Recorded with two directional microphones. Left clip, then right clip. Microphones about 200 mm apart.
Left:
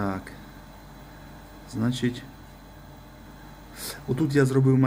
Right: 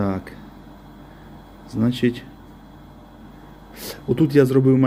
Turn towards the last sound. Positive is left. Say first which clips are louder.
# right 6 dB
turn(degrees=-15)  # may be behind; listen again after turning